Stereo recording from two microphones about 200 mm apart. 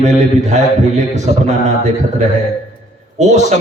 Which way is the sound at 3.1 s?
35° right (ahead or behind).